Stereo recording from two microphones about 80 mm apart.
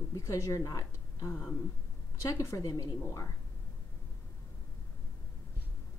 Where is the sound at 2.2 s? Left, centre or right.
Left.